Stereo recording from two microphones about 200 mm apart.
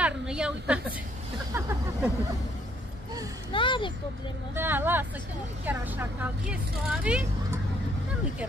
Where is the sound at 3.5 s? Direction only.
25° left (ahead or behind).